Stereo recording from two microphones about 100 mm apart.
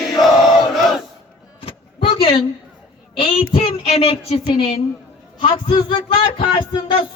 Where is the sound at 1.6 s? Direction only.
70° left (ahead or behind).